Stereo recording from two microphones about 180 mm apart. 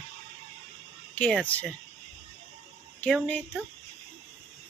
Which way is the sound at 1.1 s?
10° left (ahead or behind).